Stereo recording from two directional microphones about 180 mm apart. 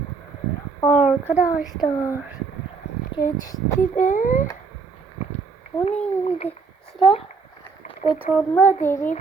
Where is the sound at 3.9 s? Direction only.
45° left (ahead or behind).